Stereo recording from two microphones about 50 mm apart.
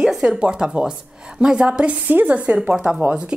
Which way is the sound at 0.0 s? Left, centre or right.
Centre.